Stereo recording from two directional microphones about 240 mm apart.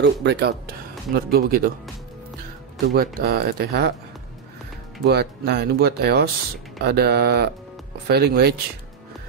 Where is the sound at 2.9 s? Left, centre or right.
Right.